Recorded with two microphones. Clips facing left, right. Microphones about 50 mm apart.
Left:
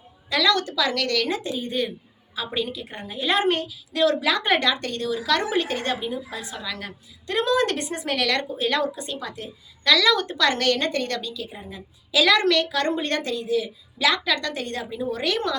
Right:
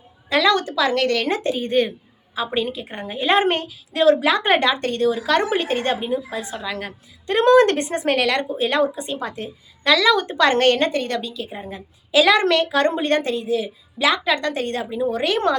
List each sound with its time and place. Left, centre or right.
0.3 s a woman's voice: right
2.3 s a woman's voice: right